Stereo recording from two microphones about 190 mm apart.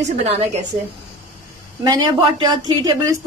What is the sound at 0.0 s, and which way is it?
Speech, 35° right (ahead or behind).